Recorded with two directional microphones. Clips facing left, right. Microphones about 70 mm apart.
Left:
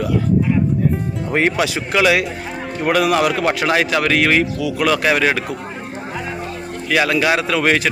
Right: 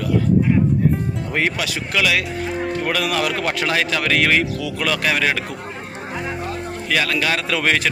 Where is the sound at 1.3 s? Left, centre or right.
Left.